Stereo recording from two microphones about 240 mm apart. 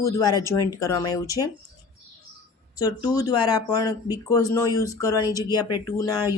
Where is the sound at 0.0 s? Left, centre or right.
Centre.